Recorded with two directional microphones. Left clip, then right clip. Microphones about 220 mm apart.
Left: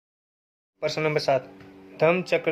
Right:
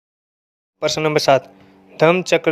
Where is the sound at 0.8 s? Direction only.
35° right (ahead or behind).